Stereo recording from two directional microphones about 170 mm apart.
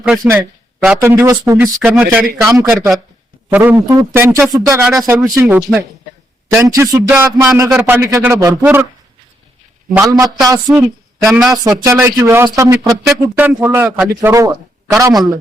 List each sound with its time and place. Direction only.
0.9 s a man's voice: 15° right (ahead or behind)
9.9 s a man's voice: 20° right (ahead or behind)
11.2 s speech: centre (ahead or behind)
11.6 s a man's voice: 20° right (ahead or behind)